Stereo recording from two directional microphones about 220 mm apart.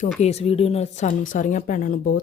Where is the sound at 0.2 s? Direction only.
30° left (ahead or behind).